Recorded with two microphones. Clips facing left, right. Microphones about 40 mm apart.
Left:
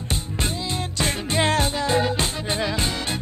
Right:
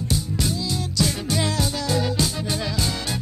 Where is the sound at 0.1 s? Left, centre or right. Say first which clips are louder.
Right 1 dB; left.